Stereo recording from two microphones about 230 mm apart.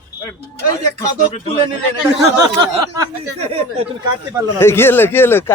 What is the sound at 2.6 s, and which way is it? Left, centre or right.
Speech, centre.